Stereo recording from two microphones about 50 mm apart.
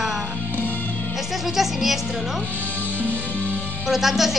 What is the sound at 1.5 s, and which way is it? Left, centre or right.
Speech, centre.